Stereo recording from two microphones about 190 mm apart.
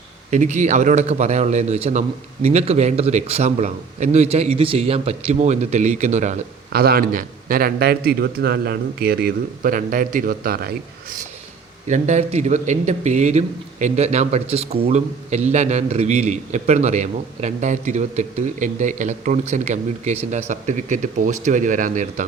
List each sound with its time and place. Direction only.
0.3 s a man's voice: 40° right (ahead or behind)
6.7 s a man's voice: 50° right (ahead or behind)
11.9 s a man's voice: 40° right (ahead or behind)